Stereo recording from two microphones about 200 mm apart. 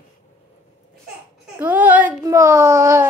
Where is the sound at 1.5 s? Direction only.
10° right (ahead or behind).